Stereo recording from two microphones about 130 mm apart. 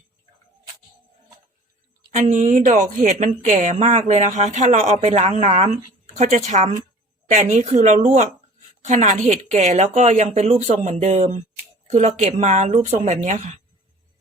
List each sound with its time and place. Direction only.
2.1 s a woman's voice: 65° right (ahead or behind)
10.2 s a woman's voice: 50° right (ahead or behind); by 13.5 s 65° right (ahead or behind)